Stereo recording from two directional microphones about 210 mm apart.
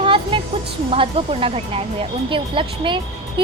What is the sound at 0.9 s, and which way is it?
Speech, 25° right (ahead or behind).